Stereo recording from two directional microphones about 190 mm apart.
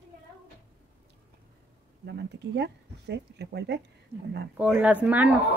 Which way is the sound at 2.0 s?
65° right (ahead or behind).